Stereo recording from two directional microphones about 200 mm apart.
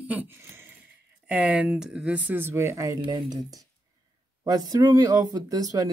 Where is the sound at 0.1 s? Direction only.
10° right (ahead or behind).